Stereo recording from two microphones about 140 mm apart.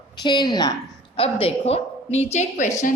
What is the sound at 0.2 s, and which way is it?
Speech, 30° left (ahead or behind).